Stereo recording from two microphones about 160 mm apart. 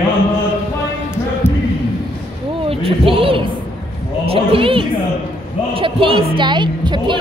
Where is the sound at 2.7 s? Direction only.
35° right (ahead or behind).